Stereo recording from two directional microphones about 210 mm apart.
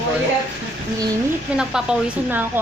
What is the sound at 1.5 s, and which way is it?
Speech, 5° right (ahead or behind).